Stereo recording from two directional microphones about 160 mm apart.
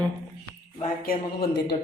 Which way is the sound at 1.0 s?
75° left (ahead or behind).